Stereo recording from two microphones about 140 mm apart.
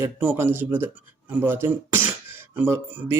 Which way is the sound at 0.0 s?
15° right (ahead or behind).